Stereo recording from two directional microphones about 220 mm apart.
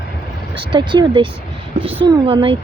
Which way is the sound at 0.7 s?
20° right (ahead or behind).